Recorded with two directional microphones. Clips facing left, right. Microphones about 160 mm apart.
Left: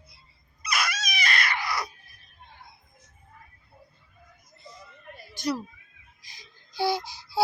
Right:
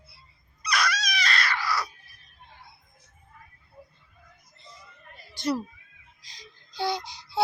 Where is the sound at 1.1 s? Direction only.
10° left (ahead or behind).